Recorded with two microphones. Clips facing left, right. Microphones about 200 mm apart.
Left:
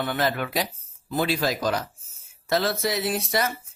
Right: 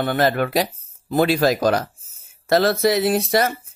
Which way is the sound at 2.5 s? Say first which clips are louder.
Right 8 dB; 80° right.